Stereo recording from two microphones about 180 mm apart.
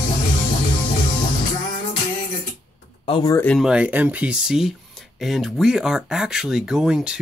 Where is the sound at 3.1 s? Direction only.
20° left (ahead or behind).